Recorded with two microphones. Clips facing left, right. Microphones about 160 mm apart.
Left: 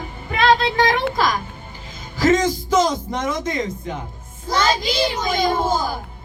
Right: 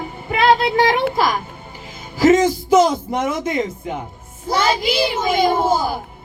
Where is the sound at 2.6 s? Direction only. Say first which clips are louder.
Right 6 dB; 10° right (ahead or behind).